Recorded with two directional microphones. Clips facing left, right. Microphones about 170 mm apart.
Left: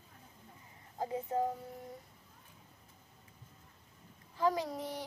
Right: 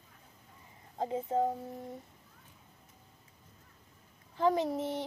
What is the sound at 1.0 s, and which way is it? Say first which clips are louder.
Child singing: right 3 dB; 25° right (ahead or behind).